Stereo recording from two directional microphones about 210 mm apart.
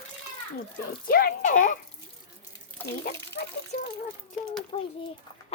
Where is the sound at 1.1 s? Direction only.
45° left (ahead or behind).